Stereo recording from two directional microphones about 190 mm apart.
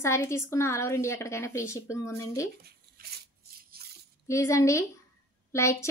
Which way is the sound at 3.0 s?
50° right (ahead or behind).